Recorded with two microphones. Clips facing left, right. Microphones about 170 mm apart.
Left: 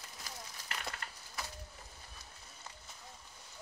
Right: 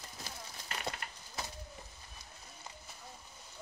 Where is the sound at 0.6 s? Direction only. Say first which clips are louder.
Right 4 dB; 25° right (ahead or behind).